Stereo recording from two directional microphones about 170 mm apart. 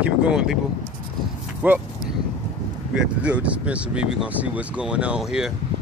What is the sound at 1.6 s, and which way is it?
Speech, 10° right (ahead or behind).